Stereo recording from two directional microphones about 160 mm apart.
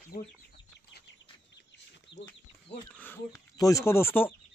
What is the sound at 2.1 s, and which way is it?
Speech, 90° left.